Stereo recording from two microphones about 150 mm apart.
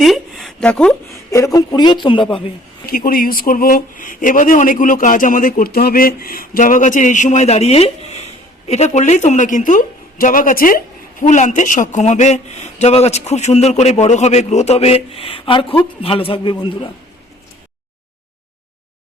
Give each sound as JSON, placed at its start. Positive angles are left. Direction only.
{"t": 0.0, "sound": "a sound", "side_deg": 0}
{"t": 1.5, "sound": "a man's voice", "side_deg": 30}
{"t": 2.8, "sound": "a man's voice", "side_deg": 75}